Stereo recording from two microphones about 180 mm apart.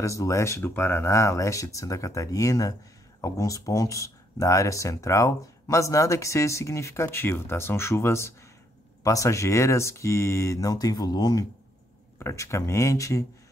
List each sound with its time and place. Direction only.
0.0 s speech: 15° left (ahead or behind)